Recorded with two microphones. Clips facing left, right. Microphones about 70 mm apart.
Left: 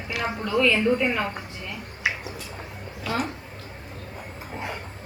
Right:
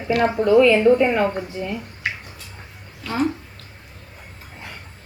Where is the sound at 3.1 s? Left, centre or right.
Centre.